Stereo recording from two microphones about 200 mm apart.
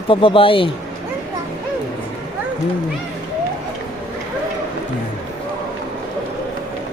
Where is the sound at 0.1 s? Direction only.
25° left (ahead or behind).